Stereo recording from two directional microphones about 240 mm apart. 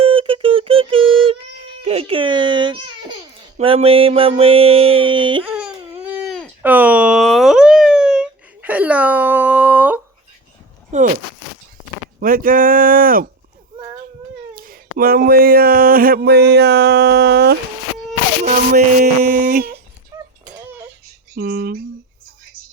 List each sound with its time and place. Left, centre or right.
0.0 s music: right
3.6 s a sound: right
6.2 s a sound: centre
10.9 s speech: right
12.2 s speech: right
14.5 s speech: right
21.3 s speech: right